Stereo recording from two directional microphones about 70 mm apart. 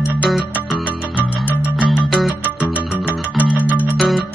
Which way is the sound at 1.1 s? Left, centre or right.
Left.